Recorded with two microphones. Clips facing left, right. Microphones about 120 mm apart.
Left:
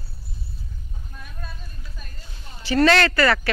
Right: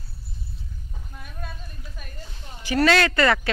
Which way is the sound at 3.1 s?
20° right (ahead or behind).